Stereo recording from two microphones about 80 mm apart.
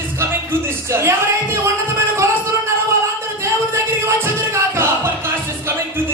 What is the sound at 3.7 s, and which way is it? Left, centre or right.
Music, right.